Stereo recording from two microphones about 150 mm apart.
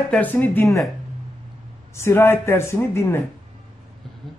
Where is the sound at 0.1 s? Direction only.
10° left (ahead or behind).